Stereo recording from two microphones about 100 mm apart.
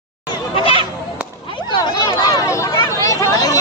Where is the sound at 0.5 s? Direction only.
65° left (ahead or behind).